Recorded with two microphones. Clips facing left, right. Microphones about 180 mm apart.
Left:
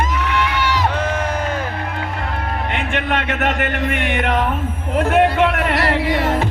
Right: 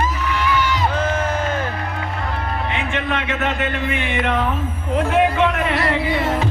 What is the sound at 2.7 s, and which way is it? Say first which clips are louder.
Music: left 2 dB; 60° left (ahead or behind).